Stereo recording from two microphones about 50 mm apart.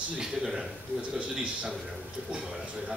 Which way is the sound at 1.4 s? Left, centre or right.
Right.